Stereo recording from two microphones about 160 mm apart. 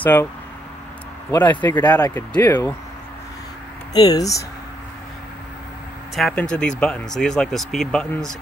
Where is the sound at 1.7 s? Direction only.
25° left (ahead or behind).